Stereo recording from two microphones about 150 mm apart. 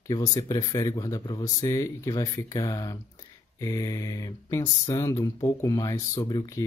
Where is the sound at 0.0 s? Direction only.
25° left (ahead or behind).